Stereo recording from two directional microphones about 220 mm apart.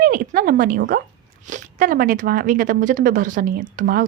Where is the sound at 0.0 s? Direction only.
40° right (ahead or behind).